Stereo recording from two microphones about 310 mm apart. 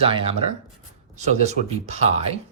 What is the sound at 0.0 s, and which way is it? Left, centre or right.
Speech, centre.